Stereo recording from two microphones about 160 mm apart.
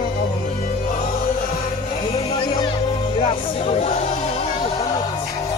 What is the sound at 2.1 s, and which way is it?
Music, 35° left (ahead or behind).